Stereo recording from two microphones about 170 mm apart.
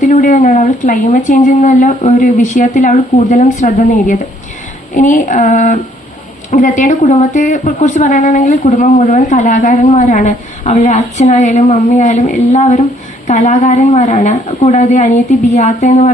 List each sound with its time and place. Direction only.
0.0 s a woman's voice: 50° left (ahead or behind)